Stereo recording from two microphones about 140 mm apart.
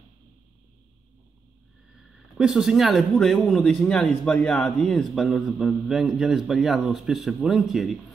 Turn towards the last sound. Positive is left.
turn(degrees=0)  # may be behind; listen again after turning